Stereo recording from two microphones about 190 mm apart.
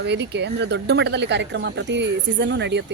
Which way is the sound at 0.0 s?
65° right (ahead or behind).